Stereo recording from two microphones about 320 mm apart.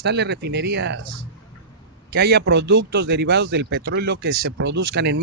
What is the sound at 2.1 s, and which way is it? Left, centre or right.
Speech, right.